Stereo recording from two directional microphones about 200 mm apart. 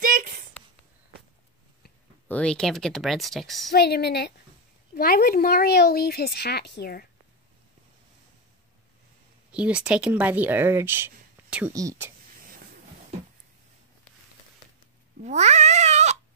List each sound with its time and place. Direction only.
0.0 s a sound: 45° right (ahead or behind)
2.2 s a woman's voice: 5° left (ahead or behind)
3.7 s speech: 55° left (ahead or behind)
9.5 s speech: 5° right (ahead or behind)
15.2 s cat: 35° right (ahead or behind)